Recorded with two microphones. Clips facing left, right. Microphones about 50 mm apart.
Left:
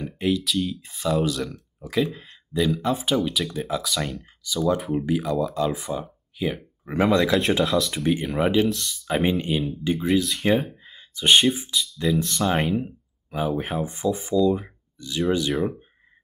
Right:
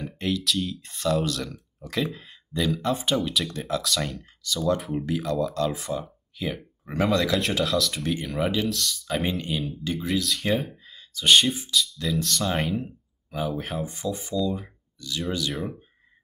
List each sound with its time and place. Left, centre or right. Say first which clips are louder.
0.0 s speech: left 3 dB; centre; by 12.1 s left
12.1 s speech: left 5 dB; centre
13.8 s speech: left 5 dB; left
14.4 s speech: left 7 dB; centre
15.0 s speech: left 5 dB; left